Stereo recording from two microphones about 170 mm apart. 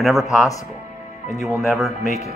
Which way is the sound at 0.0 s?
Centre (ahead or behind).